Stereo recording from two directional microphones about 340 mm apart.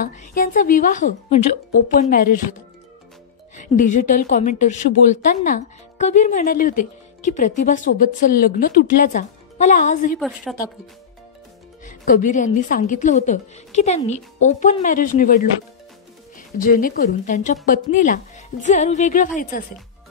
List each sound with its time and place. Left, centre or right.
0.0 s a woman's voice: left
3.5 s a woman's voice: left
10.1 s a woman's voice: centre
11.8 s a woman's voice: left